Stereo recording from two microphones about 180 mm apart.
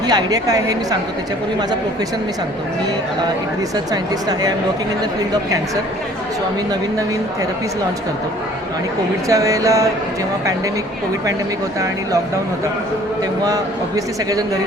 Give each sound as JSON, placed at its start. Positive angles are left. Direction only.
{"t": 0.1, "sound": "a man's voice", "side_deg": -20}
{"t": 3.9, "sound": "a man's voice", "side_deg": -20}
{"t": 9.3, "sound": "a sound", "side_deg": -20}
{"t": 13.4, "sound": "a man's voice", "side_deg": -20}